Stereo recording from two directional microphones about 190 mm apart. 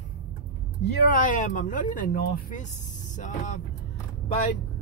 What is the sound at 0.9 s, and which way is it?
Speech, 45° left (ahead or behind).